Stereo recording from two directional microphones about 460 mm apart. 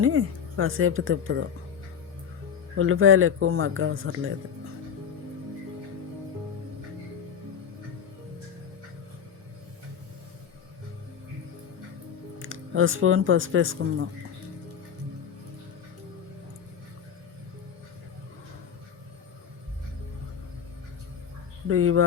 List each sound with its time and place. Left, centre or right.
0.0 s speech: right
2.7 s speech: right
12.4 s speech: right
21.7 s speech: right